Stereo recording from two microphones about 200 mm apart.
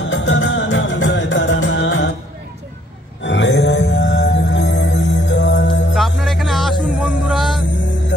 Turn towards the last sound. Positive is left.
turn(degrees=0)  # may be behind; listen again after turning